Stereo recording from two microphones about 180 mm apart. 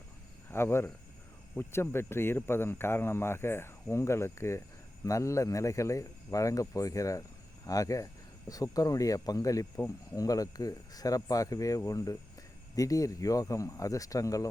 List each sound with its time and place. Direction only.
0.5 s speech: 15° left (ahead or behind)